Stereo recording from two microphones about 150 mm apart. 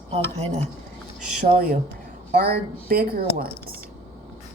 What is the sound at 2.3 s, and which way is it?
Speech, 90° right.